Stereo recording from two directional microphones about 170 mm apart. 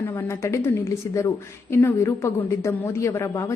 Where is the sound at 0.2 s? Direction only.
15° left (ahead or behind).